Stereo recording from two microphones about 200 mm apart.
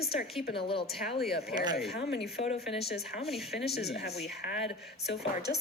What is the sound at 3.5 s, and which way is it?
A woman's voice, 55° left (ahead or behind).